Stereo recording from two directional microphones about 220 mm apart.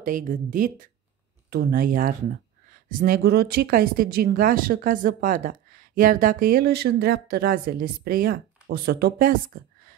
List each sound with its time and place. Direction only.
0.0 s speech: 40° right (ahead or behind)